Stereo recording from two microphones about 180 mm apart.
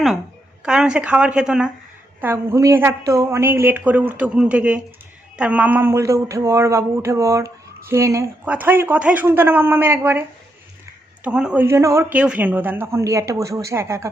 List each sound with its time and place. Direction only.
0.6 s a woman's voice: 5° right (ahead or behind)